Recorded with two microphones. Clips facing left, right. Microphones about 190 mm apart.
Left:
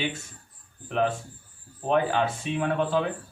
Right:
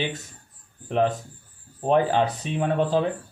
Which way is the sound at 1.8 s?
35° right (ahead or behind).